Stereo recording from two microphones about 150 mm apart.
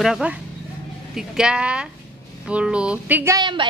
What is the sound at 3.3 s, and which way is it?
Speech, 30° right (ahead or behind).